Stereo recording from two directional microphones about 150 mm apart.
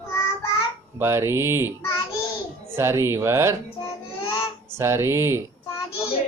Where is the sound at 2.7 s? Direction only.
15° right (ahead or behind).